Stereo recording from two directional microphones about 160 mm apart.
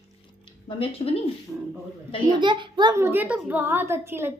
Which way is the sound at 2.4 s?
30° right (ahead or behind).